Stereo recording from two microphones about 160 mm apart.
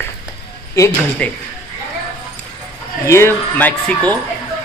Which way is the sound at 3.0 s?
15° left (ahead or behind).